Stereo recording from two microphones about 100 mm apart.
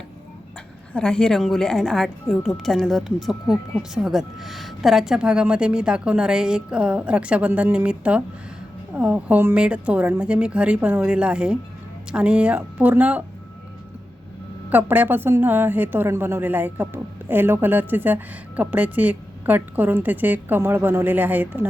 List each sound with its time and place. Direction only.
0.9 s a woman's voice: 10° left (ahead or behind); by 13.2 s 15° right (ahead or behind)
14.7 s a woman's voice: 20° right (ahead or behind)